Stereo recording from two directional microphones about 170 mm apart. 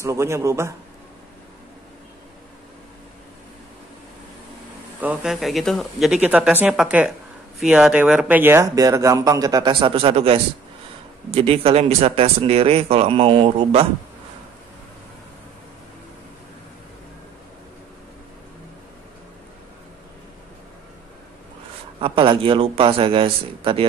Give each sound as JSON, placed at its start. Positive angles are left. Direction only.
{"t": 0.0, "sound": "a man's voice", "side_deg": -15}
{"t": 5.0, "sound": "a woman's voice", "side_deg": -5}
{"t": 22.0, "sound": "speech", "side_deg": -30}